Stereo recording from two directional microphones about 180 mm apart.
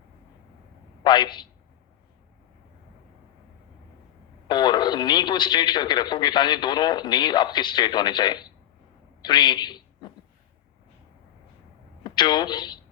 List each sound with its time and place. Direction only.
1.0 s speech: 25° left (ahead or behind)
4.4 s a woman's voice: 25° left (ahead or behind)
12.0 s speech: 25° left (ahead or behind)